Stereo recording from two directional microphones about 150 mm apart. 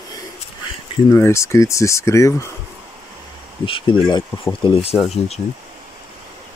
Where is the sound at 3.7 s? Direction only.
30° left (ahead or behind).